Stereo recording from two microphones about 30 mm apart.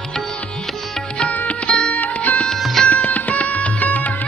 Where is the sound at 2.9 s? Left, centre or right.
Left.